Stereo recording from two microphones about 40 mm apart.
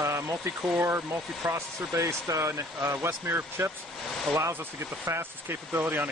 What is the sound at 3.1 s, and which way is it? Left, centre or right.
Speech, right.